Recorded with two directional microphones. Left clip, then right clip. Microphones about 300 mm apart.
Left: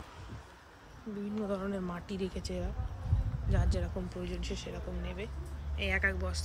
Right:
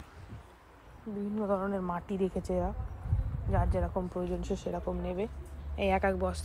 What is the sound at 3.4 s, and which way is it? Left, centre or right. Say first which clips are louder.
Speech: right 6 dB; centre.